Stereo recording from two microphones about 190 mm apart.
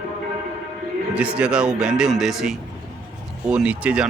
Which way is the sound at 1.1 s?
5° right (ahead or behind).